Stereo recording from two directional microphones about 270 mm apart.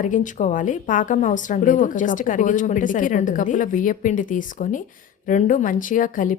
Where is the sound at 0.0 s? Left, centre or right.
Left.